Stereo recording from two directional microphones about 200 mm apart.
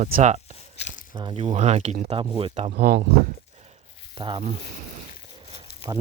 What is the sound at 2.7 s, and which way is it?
Speech, 50° right (ahead or behind).